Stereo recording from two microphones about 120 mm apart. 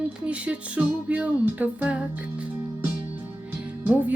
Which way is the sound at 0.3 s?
10° right (ahead or behind).